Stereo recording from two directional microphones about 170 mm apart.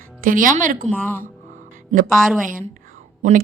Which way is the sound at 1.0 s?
15° left (ahead or behind).